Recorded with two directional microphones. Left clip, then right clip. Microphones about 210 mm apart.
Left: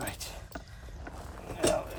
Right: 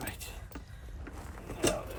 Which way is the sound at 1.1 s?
25° left (ahead or behind).